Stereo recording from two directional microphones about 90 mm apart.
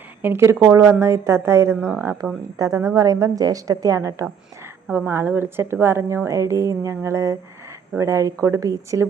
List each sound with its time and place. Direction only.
0.2 s a woman's voice: 25° right (ahead or behind)
0.6 s a woman's voice: 35° right (ahead or behind)
2.2 s speech: 5° right (ahead or behind)
2.6 s a woman's voice: 40° right (ahead or behind)
4.9 s a woman's voice: 25° right (ahead or behind)